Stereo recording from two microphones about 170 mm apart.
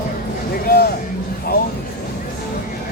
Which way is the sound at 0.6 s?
65° left (ahead or behind).